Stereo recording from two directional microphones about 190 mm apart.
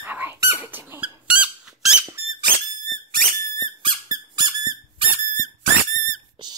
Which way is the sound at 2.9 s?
45° right (ahead or behind).